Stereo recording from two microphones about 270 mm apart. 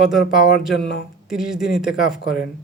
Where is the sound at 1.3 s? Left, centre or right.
Centre.